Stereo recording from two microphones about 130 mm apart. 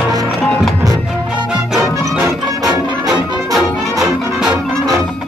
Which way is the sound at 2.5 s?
25° right (ahead or behind).